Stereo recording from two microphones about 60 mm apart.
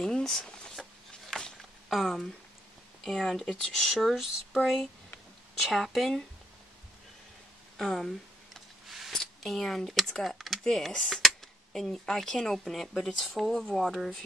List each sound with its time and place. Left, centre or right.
0.0 s a sound: centre
3.0 s speech: centre
7.7 s speech: centre
8.8 s a sound: centre
9.1 s speech: centre
13.8 s speech: centre